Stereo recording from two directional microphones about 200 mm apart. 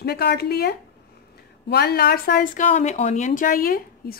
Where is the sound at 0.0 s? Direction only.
55° left (ahead or behind).